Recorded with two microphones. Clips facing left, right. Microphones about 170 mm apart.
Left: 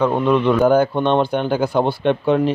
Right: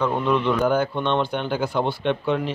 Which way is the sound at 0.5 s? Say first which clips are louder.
Left 6 dB; 45° left (ahead or behind).